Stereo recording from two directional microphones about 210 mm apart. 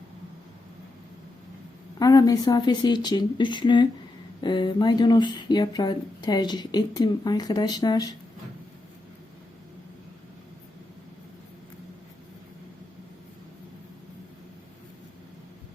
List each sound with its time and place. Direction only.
2.0 s speech: 15° left (ahead or behind)